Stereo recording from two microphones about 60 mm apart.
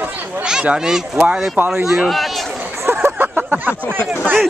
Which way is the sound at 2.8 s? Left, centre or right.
Right.